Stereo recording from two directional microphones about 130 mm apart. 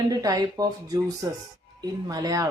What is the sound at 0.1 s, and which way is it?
Speech, 30° right (ahead or behind).